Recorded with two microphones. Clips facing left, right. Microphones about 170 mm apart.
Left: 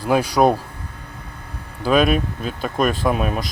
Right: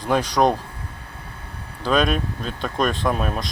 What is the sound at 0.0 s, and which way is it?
Speech, 10° left (ahead or behind).